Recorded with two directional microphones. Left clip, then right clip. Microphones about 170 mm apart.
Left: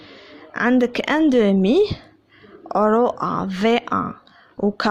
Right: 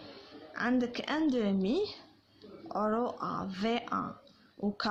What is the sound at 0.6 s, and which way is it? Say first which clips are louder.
A woman's voice: left 14 dB; 55° left (ahead or behind).